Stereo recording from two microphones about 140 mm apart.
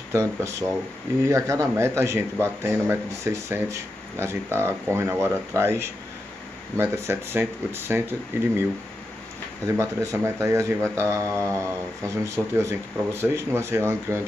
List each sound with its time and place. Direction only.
0.1 s speech: 20° right (ahead or behind)
9.7 s speech: 20° right (ahead or behind)